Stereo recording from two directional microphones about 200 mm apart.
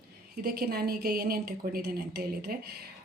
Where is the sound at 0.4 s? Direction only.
50° right (ahead or behind).